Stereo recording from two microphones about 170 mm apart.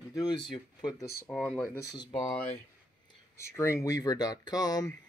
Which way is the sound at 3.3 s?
15° left (ahead or behind).